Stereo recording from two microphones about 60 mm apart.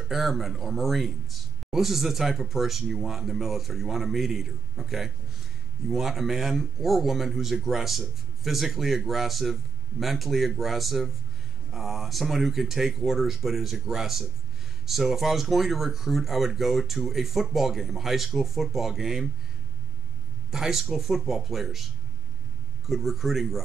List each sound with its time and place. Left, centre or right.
0.1 s speech: centre
20.5 s speech: centre
22.8 s speech: centre